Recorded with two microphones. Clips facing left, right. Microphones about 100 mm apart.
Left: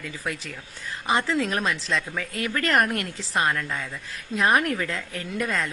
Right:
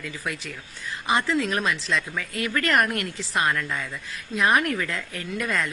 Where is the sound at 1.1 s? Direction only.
35° left (ahead or behind).